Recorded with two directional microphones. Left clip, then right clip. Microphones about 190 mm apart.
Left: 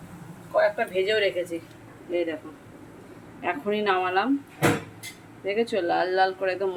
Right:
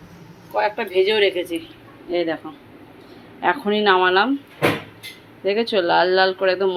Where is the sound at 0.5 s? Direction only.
25° right (ahead or behind).